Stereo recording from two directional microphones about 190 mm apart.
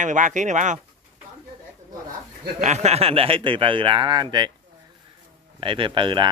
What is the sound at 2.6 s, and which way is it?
A man's voice, 35° right (ahead or behind).